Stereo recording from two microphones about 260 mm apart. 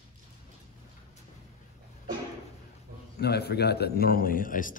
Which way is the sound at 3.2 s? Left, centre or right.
Left.